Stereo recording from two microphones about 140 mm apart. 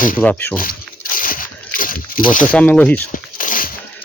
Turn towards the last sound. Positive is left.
turn(degrees=75)  # may be behind; listen again after turning